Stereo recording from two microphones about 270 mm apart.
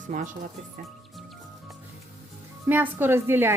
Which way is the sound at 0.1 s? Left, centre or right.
Right.